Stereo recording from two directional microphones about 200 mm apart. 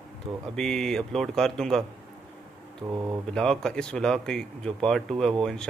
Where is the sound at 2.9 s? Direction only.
20° right (ahead or behind).